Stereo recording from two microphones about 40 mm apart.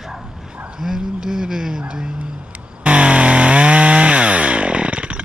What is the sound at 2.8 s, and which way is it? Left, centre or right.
Chainsaw, right.